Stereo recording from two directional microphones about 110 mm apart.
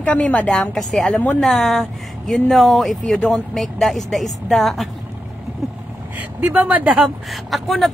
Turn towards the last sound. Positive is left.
turn(degrees=0)  # may be behind; listen again after turning